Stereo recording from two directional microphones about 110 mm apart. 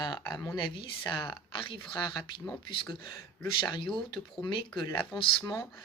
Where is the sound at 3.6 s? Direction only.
45° left (ahead or behind).